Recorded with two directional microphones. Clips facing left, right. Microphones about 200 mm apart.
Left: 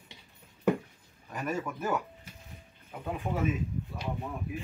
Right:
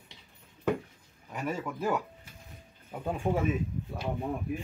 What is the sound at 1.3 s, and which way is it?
Speech, 10° right (ahead or behind).